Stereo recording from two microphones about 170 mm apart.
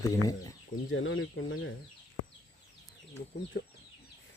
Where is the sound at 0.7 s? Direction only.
60° left (ahead or behind).